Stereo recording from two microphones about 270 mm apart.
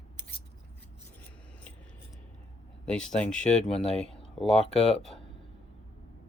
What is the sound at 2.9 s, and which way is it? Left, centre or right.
Speech, centre.